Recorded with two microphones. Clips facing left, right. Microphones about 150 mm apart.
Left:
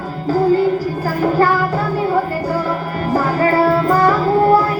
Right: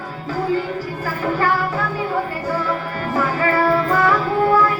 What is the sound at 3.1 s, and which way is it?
Music, 40° left (ahead or behind).